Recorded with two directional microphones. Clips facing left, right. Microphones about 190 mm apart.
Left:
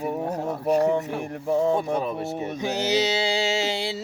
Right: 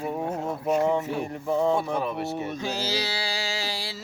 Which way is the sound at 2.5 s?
20° left (ahead or behind).